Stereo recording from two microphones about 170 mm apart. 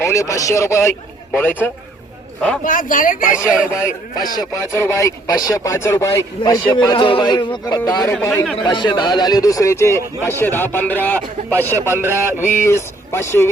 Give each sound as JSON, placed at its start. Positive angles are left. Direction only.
{"t": 0.0, "sound": "speech", "side_deg": 15}
{"t": 2.6, "sound": "speech", "side_deg": 50}
{"t": 3.3, "sound": "speech", "side_deg": -5}
{"t": 3.7, "sound": "a man's voice", "side_deg": 15}
{"t": 8.5, "sound": "speech", "side_deg": 25}